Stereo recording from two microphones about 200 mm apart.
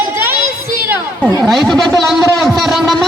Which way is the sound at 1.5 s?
Centre (ahead or behind).